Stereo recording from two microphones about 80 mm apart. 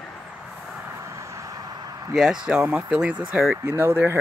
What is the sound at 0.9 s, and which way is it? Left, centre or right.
Vehicle, right.